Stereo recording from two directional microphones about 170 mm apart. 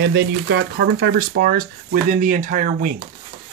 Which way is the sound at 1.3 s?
65° right (ahead or behind).